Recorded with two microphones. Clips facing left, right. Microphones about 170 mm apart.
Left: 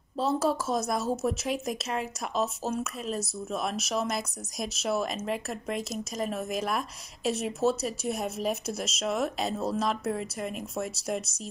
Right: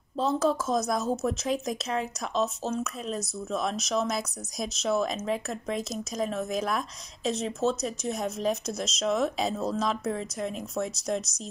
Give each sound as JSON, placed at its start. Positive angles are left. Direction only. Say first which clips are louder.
{"t": 0.2, "sound": "speech", "louder": "right 1 dB", "side_deg": 5}